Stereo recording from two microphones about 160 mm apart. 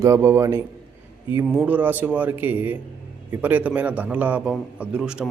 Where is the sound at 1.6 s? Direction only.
10° right (ahead or behind).